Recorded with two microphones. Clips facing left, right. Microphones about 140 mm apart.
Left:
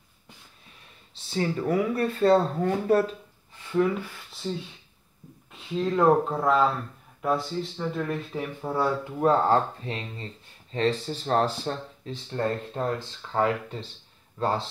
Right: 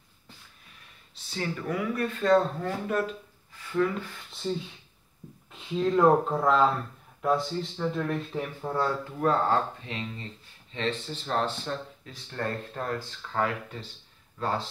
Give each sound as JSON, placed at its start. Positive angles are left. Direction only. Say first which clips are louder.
{"t": 1.3, "sound": "speech", "louder": "left 6 dB", "side_deg": 35}
{"t": 4.3, "sound": "speech", "louder": "right 2 dB", "side_deg": 0}
{"t": 9.2, "sound": "speech", "louder": "left 4 dB", "side_deg": 35}
{"t": 12.1, "sound": "speech", "louder": "left 5 dB", "side_deg": 25}